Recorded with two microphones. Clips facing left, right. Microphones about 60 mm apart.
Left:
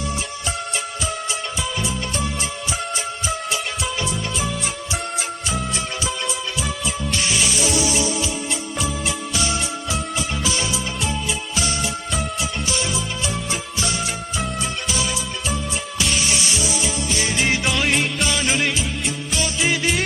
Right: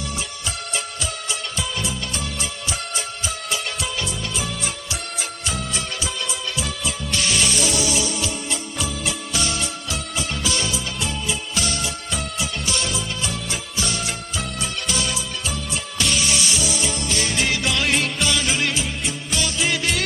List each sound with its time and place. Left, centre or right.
2.9 s music: centre
6.6 s music: centre
8.1 s music: centre
10.8 s music: centre
14.3 s music: centre
16.1 s music: left
16.7 s music: centre